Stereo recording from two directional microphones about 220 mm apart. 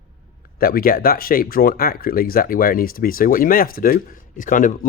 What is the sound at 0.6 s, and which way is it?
Speech, 40° left (ahead or behind).